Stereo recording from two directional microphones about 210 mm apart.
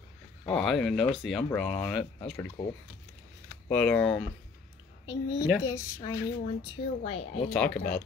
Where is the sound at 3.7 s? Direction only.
5° left (ahead or behind).